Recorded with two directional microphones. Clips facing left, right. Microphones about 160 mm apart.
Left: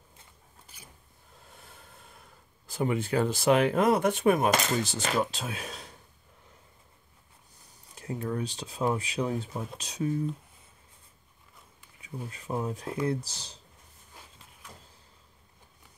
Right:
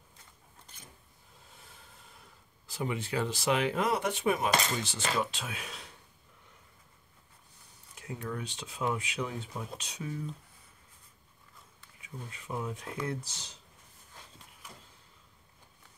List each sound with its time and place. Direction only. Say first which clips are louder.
0.7 s zipper: left 2 dB; 5° left (ahead or behind)
2.6 s speech: left 6 dB; 50° left (ahead or behind)
7.9 s speech: left 5 dB; 35° left (ahead or behind)
12.3 s speech: left 5 dB; 35° left (ahead or behind)